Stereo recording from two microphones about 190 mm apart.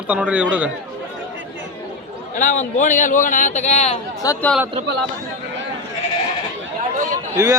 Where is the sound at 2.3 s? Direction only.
40° left (ahead or behind).